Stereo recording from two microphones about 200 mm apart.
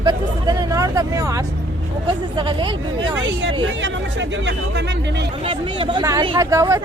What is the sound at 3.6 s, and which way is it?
Speech, 65° right (ahead or behind).